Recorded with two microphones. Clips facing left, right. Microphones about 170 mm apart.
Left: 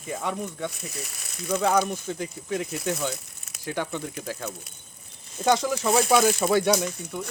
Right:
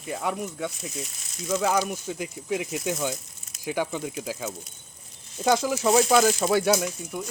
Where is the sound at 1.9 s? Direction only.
10° right (ahead or behind).